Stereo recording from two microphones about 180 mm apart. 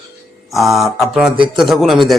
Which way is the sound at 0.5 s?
Centre (ahead or behind).